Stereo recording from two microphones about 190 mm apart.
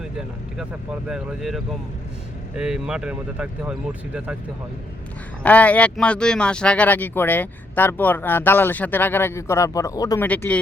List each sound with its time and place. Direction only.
0.0 s speech: 5° right (ahead or behind)
5.4 s speech: 5° left (ahead or behind)
10.2 s speech: 5° left (ahead or behind)